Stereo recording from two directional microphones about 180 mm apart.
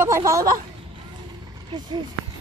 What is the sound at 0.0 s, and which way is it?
Speech, 15° right (ahead or behind).